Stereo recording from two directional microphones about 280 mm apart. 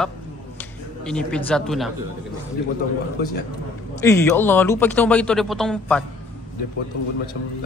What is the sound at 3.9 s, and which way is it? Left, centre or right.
A man's voice, centre.